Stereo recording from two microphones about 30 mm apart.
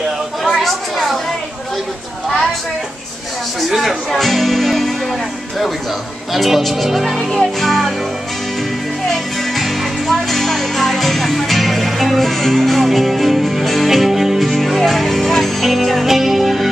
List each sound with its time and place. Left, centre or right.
0.6 s a sound: centre
2.2 s a sound: centre
3.6 s speech: centre
4.1 s music: centre
6.3 s speech: centre
9.6 s music: centre